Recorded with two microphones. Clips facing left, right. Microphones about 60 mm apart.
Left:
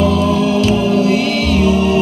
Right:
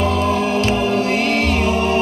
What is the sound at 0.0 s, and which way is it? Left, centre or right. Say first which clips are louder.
Music: left 4 dB; right.